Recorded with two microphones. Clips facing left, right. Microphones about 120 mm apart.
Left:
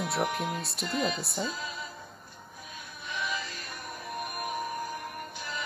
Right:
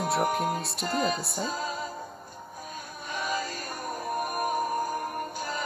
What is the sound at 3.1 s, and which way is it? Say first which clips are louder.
Music: right 4 dB; 40° right (ahead or behind).